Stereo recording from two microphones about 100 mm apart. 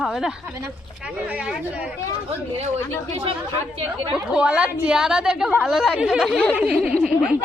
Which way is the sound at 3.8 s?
60° right (ahead or behind).